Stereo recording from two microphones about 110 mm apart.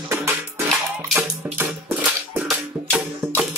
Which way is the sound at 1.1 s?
15° right (ahead or behind).